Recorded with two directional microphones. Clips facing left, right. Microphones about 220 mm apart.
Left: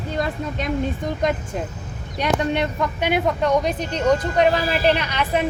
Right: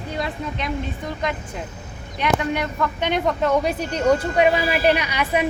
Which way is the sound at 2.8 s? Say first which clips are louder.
Right 1 dB; 10° left (ahead or behind).